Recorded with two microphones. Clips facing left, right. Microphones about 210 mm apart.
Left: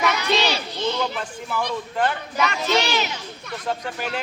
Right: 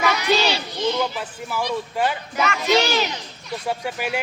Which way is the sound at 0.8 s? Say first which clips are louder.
Right 3 dB; 10° right (ahead or behind).